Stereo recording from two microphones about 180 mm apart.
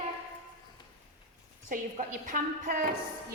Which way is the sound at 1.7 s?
45° right (ahead or behind).